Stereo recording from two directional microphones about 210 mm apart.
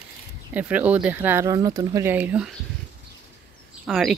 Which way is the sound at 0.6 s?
5° right (ahead or behind).